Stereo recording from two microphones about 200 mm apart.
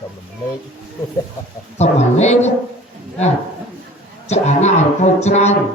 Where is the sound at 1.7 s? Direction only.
35° left (ahead or behind).